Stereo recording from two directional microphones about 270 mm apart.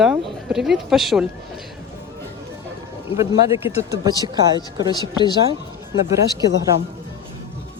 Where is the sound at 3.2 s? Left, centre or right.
Centre.